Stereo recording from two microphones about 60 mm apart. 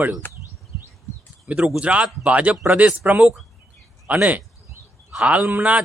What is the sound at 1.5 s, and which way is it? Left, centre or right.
Speech, centre.